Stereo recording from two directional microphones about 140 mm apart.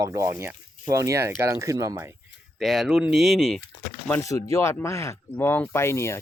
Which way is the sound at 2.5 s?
Centre (ahead or behind).